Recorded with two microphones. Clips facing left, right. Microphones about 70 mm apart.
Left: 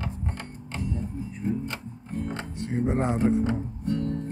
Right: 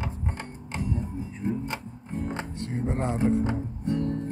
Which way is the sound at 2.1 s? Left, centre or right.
Centre.